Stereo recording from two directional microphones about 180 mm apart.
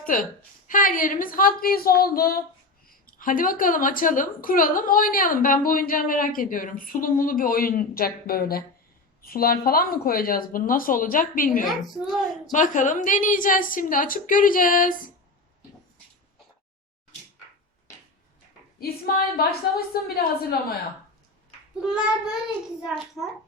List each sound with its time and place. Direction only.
0.0 s a woman's voice: 50° left (ahead or behind)
11.6 s a woman's voice: centre (ahead or behind)
12.5 s a woman's voice: 45° left (ahead or behind)
18.8 s a woman's voice: 55° left (ahead or behind)
21.8 s a woman's voice: centre (ahead or behind)